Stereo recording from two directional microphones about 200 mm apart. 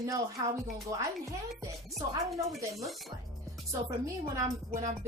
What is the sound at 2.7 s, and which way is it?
Speech, centre (ahead or behind).